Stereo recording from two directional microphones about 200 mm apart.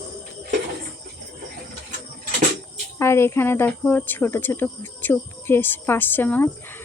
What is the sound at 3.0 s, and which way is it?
Speech, 15° left (ahead or behind).